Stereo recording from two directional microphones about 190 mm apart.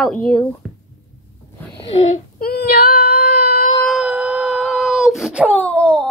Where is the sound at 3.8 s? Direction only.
5° right (ahead or behind).